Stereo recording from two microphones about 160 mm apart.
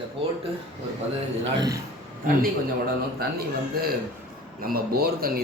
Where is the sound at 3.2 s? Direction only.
75° right (ahead or behind).